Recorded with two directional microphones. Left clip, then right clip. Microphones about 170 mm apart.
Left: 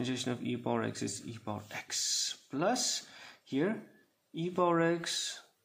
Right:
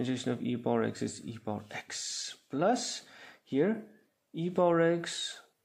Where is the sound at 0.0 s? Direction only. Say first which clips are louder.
Right 2 dB; 25° right (ahead or behind).